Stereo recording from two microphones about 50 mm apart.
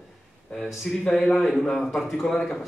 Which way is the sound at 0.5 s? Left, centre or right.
Left.